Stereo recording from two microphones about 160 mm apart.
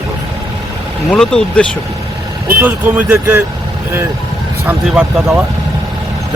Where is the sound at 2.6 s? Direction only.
10° right (ahead or behind).